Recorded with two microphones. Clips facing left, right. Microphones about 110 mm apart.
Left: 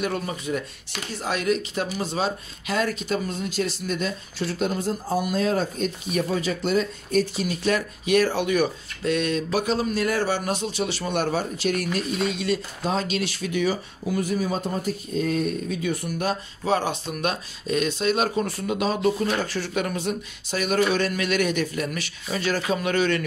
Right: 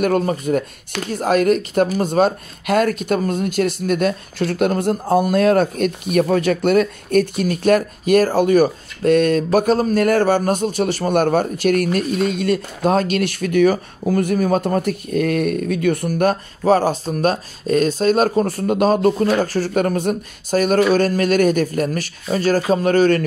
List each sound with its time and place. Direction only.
0.2 s speech: 50° right (ahead or behind)
16.1 s speech: 50° right (ahead or behind)